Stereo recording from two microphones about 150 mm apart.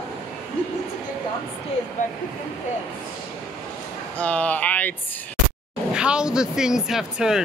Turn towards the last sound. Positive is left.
turn(degrees=-5)  # may be behind; listen again after turning